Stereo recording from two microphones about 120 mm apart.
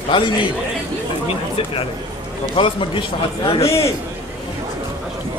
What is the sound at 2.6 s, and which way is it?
Speech, 45° left (ahead or behind).